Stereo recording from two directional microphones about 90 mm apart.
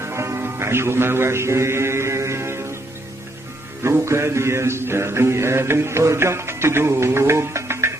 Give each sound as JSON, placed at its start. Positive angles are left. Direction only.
{"t": 0.0, "sound": "a man's voice", "side_deg": -30}
{"t": 3.8, "sound": "mantra", "side_deg": -30}